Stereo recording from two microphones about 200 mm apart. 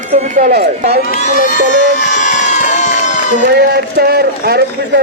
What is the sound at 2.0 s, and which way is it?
Run, 40° left (ahead or behind).